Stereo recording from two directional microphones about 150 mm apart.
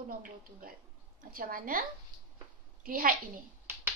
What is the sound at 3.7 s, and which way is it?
Finger snapping, 15° right (ahead or behind).